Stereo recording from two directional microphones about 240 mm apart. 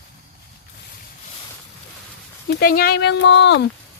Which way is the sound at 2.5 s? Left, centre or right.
Left.